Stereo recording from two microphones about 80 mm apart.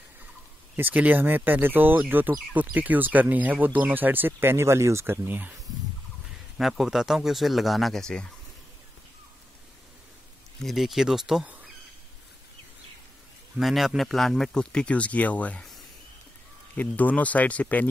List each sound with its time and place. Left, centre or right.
0.7 s speech: right
6.6 s speech: centre
10.6 s speech: centre
13.6 s speech: centre
16.7 s speech: left